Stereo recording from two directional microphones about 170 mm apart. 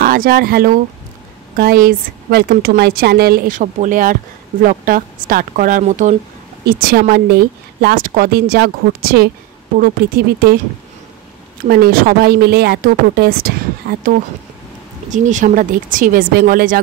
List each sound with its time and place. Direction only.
0.0 s a woman's voice: 60° right (ahead or behind)
6.6 s a woman's voice: 65° right (ahead or behind)
11.6 s a woman's voice: 60° right (ahead or behind)
15.0 s speech: 45° right (ahead or behind)